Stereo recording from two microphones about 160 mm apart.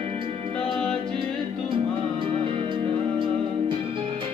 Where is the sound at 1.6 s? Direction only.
30° right (ahead or behind).